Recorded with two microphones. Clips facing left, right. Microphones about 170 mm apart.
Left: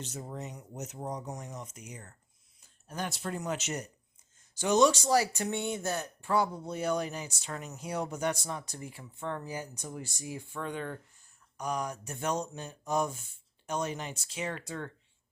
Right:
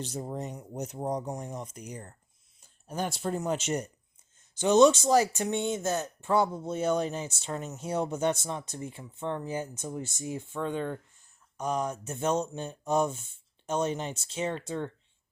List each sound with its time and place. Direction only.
0.0 s speech: 35° right (ahead or behind)